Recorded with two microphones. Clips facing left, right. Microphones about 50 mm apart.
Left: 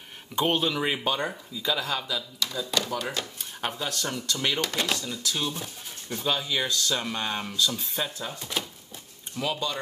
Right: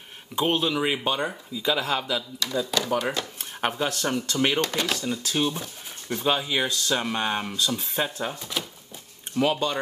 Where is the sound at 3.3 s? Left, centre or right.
Right.